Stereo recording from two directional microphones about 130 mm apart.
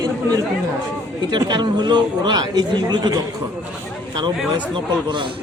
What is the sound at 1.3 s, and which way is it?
Speech, 35° right (ahead or behind).